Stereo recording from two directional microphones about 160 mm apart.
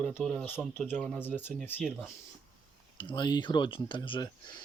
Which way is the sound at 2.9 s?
30° left (ahead or behind).